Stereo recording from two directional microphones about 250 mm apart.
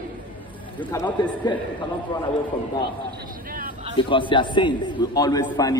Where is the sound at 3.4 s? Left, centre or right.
Right.